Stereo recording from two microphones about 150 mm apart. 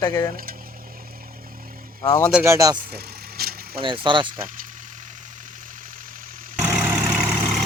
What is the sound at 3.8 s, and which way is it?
Speech, 35° right (ahead or behind).